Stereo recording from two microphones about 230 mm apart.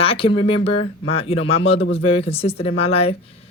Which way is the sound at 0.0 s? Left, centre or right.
Left.